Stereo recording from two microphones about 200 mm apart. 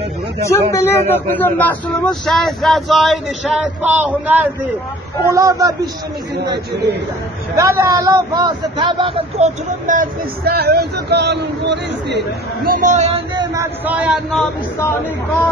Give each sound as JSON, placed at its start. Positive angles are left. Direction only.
{"t": 0.4, "sound": "a man's voice", "side_deg": 15}
{"t": 7.5, "sound": "a man's voice", "side_deg": -15}
{"t": 9.8, "sound": "a man's voice", "side_deg": -45}
{"t": 13.3, "sound": "a sound", "side_deg": -20}
{"t": 13.8, "sound": "a man's voice", "side_deg": -5}